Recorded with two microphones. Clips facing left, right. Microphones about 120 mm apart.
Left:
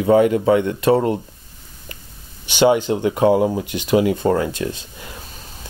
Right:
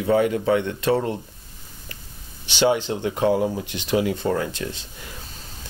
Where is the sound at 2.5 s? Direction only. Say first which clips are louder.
Left 5 dB; 50° left (ahead or behind).